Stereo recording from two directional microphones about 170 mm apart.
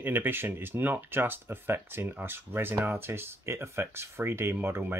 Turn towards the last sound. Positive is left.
turn(degrees=-10)  # may be behind; listen again after turning